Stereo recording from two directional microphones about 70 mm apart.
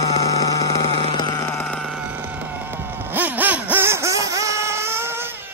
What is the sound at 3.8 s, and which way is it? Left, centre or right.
Music, right.